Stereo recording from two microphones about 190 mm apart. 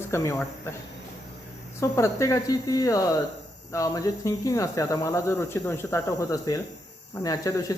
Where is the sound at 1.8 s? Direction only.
15° left (ahead or behind).